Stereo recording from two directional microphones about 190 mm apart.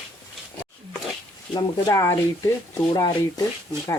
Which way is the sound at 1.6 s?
15° left (ahead or behind).